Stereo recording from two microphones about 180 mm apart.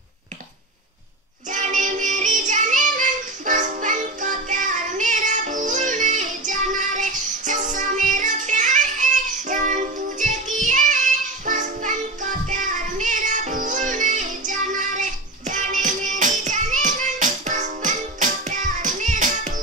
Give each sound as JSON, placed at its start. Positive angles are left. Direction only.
{"t": 1.5, "sound": "music", "side_deg": -45}